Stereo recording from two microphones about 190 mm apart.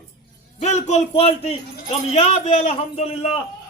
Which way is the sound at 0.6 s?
35° left (ahead or behind).